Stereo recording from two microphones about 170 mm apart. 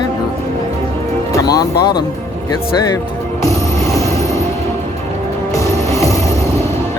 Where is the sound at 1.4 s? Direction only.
20° left (ahead or behind).